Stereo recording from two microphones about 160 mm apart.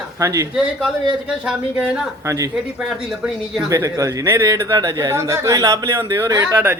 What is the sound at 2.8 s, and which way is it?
Speech, 5° right (ahead or behind).